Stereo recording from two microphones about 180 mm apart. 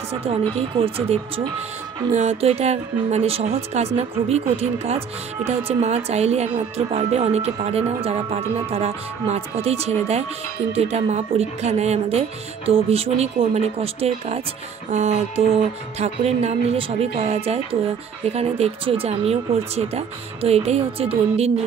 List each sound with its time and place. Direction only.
0.1 s music: 35° right (ahead or behind)